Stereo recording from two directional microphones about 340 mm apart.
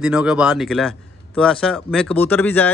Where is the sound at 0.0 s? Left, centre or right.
Centre.